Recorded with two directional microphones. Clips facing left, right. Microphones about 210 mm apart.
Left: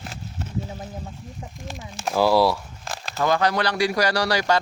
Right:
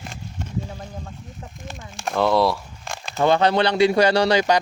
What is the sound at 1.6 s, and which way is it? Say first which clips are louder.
Speech: even; centre (ahead or behind).